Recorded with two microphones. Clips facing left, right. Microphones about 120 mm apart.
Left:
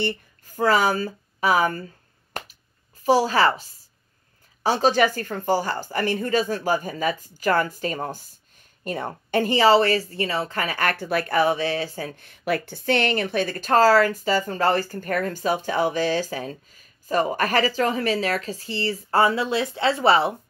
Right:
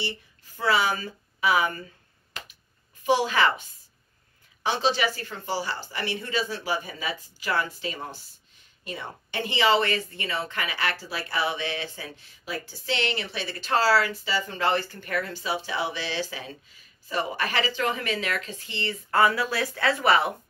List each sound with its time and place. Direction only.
0.0 s speech: 45° left (ahead or behind)
2.3 s finger snapping: 50° left (ahead or behind)
3.0 s a woman's voice: 35° left (ahead or behind)
4.6 s a woman's voice: 45° left (ahead or behind); by 20.3 s 30° left (ahead or behind)